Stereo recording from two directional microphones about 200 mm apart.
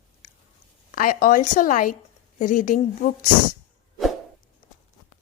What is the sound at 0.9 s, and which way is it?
A woman's voice, 45° left (ahead or behind).